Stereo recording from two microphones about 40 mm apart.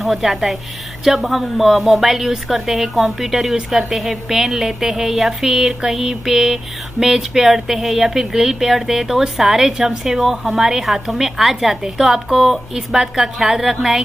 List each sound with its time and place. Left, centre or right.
0.0 s a woman's voice: centre